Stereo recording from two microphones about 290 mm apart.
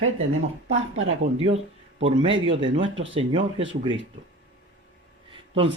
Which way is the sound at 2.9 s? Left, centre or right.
Right.